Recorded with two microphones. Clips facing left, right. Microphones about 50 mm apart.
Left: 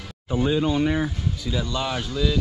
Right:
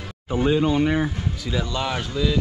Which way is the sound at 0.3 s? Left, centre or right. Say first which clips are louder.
Right 2 dB; right.